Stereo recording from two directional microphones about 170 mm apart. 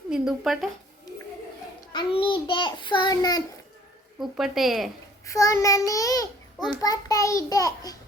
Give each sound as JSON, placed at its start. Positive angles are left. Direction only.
{"t": 0.1, "sound": "speech", "side_deg": 0}
{"t": 1.9, "sound": "a child's voice", "side_deg": 30}
{"t": 4.2, "sound": "speech", "side_deg": 0}
{"t": 5.2, "sound": "a child's voice", "side_deg": 20}